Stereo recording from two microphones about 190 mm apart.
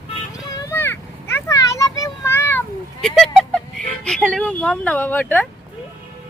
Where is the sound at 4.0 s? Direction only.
5° left (ahead or behind).